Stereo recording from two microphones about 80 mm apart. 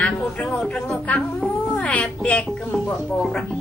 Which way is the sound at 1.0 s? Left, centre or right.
Centre.